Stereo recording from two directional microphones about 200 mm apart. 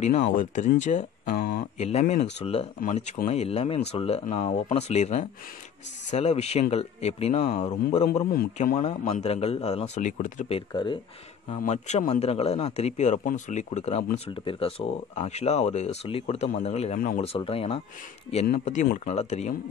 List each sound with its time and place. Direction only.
0.0 s speech: 35° left (ahead or behind)
10.7 s speech: 25° left (ahead or behind)
11.6 s speech: 35° left (ahead or behind)